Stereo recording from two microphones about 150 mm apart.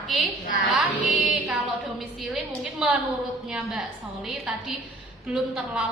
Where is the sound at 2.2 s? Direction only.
5° right (ahead or behind).